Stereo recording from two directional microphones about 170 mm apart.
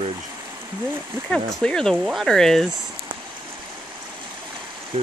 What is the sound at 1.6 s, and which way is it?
Speech, 5° left (ahead or behind).